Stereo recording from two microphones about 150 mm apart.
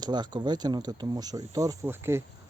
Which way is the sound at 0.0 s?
30° right (ahead or behind).